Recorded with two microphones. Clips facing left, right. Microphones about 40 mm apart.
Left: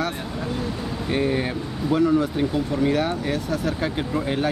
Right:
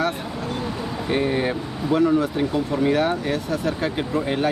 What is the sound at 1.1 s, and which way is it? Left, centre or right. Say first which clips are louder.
Speech: right 1 dB; centre.